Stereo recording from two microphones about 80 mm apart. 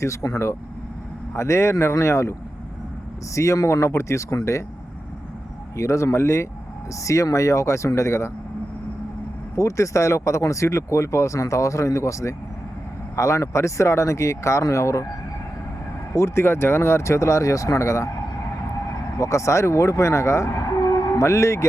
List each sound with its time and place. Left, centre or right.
0.0 s speech: left
3.3 s speech: left
5.7 s speech: left
9.6 s speech: left
16.1 s speech: left
19.2 s speech: left
20.8 s a sound: left